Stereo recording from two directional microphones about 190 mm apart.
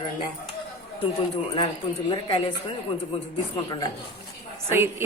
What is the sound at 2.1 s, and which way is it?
Speech, 25° left (ahead or behind).